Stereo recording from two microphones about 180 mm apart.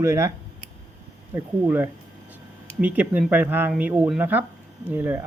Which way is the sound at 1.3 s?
10° right (ahead or behind).